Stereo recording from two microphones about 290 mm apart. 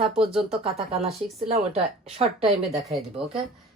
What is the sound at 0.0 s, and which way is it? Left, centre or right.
Speech, centre.